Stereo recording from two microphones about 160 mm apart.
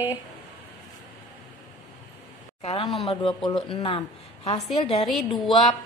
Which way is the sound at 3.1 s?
30° left (ahead or behind).